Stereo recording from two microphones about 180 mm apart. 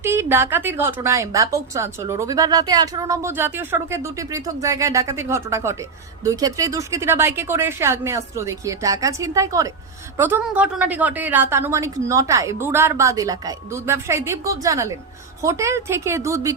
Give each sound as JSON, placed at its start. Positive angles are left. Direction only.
{"t": 0.0, "sound": "a woman's voice", "side_deg": -15}